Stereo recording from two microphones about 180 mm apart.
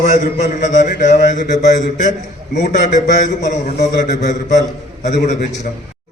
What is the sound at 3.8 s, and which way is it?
Speech, 70° left (ahead or behind).